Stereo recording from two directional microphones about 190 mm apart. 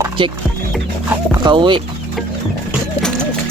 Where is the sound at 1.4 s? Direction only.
25° right (ahead or behind).